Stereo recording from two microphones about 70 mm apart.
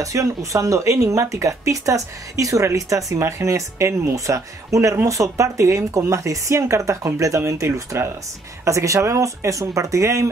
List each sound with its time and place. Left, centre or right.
0.0 s speech: right